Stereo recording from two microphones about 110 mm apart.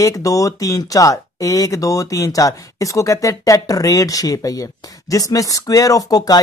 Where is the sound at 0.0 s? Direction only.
30° left (ahead or behind).